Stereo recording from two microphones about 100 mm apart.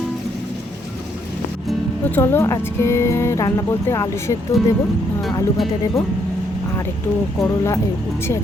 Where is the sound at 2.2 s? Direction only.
25° left (ahead or behind).